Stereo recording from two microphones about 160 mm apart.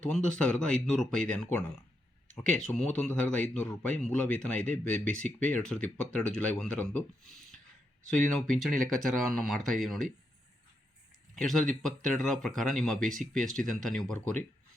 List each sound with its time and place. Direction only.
0.0 s a man's voice: 5° left (ahead or behind)
11.3 s speech: centre (ahead or behind)